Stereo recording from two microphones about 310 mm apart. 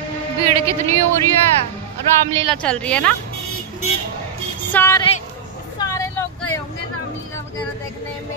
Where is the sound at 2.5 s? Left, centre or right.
Centre.